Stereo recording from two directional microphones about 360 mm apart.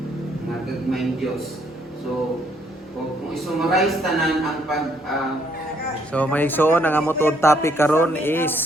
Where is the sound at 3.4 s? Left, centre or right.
Centre.